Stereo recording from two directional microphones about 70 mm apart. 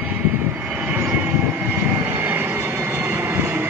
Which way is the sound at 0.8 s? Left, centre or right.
Right.